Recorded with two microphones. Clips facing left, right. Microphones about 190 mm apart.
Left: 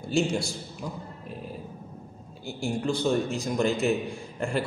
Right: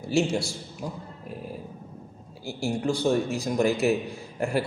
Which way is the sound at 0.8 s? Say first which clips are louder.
Right 2 dB; 35° right (ahead or behind).